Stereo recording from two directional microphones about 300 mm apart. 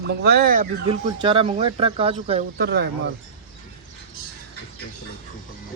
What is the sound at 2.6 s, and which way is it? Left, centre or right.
Speech, right.